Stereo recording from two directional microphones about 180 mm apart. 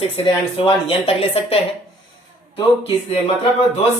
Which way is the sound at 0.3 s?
30° left (ahead or behind).